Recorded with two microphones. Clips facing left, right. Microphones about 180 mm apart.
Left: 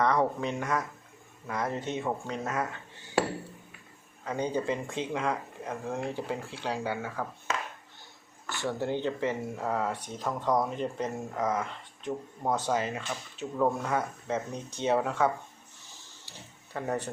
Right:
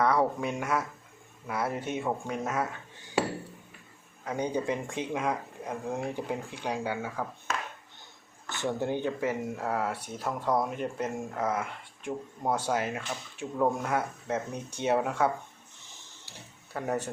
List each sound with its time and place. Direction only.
0.0 s speech: 10° right (ahead or behind)
4.3 s speech: 10° right (ahead or behind)
8.4 s speech: 20° right (ahead or behind)
16.7 s speech: 10° right (ahead or behind)